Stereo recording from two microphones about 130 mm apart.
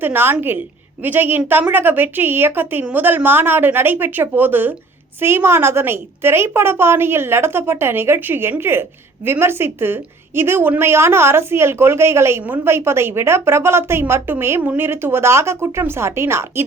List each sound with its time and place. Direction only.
0.0 s a woman's voice: 15° right (ahead or behind)